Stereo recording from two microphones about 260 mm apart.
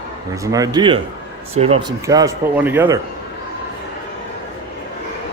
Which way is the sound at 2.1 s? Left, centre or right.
Centre.